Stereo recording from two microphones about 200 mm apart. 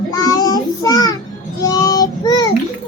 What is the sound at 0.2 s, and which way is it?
Child singing, 20° left (ahead or behind).